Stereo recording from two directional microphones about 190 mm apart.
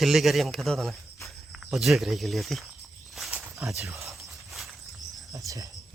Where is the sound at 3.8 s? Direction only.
15° right (ahead or behind).